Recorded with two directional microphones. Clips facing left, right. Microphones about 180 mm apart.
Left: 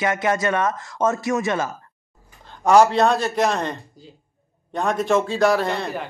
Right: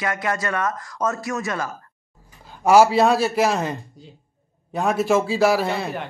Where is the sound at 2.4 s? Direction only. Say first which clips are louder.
Even; 5° right (ahead or behind).